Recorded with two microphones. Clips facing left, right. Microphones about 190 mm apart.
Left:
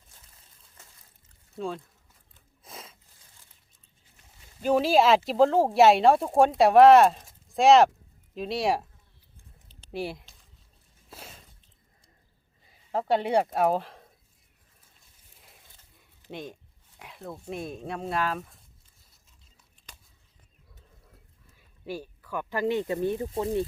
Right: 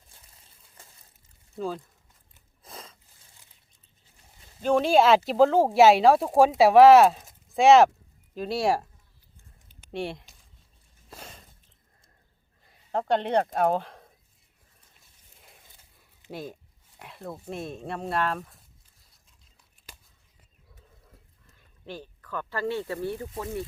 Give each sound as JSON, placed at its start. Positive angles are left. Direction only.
{"t": 1.5, "sound": "speech", "side_deg": 0}
{"t": 2.6, "sound": "a sound", "side_deg": 0}
{"t": 4.6, "sound": "speech", "side_deg": 5}
{"t": 9.9, "sound": "speech", "side_deg": 0}
{"t": 11.1, "sound": "a sound", "side_deg": 0}
{"t": 12.6, "sound": "speech", "side_deg": 5}
{"t": 15.4, "sound": "a sound", "side_deg": 0}
{"t": 16.3, "sound": "speech", "side_deg": -5}
{"t": 21.5, "sound": "speech", "side_deg": 10}